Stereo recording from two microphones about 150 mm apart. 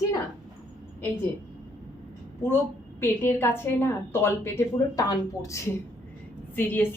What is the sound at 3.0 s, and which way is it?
Speech, 15° left (ahead or behind).